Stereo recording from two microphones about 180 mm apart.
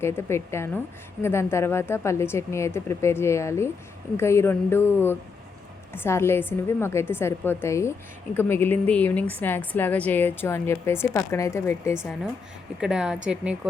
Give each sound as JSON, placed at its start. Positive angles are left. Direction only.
{"t": 0.0, "sound": "a woman's voice", "side_deg": 15}
{"t": 12.8, "sound": "speech", "side_deg": -5}